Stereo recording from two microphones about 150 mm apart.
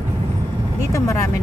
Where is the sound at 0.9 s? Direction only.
20° left (ahead or behind).